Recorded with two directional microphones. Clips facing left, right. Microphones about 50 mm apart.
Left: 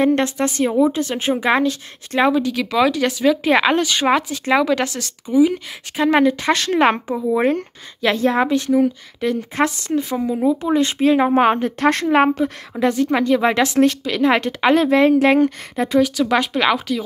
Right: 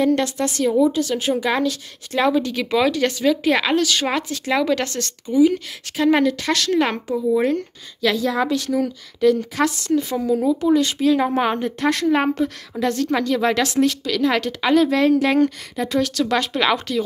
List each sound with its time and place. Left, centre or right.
0.0 s speech: left
2.3 s speech: centre
3.4 s speech: left
4.6 s speech: centre; by 16.0 s left
16.0 s speech: centre